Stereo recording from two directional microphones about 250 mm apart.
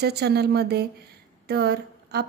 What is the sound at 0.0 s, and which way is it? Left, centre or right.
Speech, right.